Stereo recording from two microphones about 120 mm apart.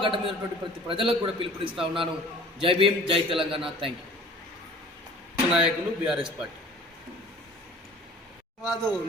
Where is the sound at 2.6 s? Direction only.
45° right (ahead or behind).